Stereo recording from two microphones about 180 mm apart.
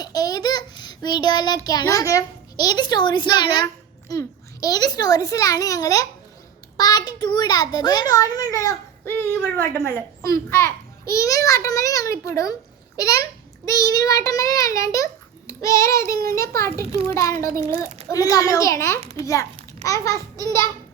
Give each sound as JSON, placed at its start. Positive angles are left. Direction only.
{"t": 0.0, "sound": "child singing", "side_deg": 20}
{"t": 4.1, "sound": "a child's voice", "side_deg": 20}
{"t": 17.8, "sound": "a child's voice", "side_deg": -35}
{"t": 18.1, "sound": "a child's voice", "side_deg": 20}